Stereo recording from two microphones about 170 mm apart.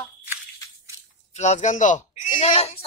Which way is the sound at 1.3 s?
40° left (ahead or behind).